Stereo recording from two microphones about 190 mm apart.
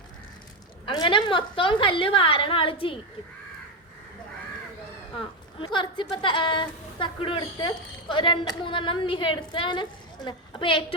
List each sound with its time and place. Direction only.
0.9 s a woman's voice: 25° left (ahead or behind)
5.5 s a woman's voice: 25° left (ahead or behind)